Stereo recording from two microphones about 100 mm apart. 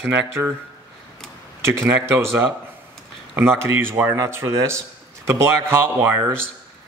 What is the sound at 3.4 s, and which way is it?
Speech, 20° right (ahead or behind).